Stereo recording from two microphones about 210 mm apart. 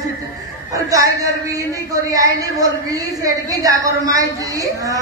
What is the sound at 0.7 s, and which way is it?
A man's voice, 15° right (ahead or behind).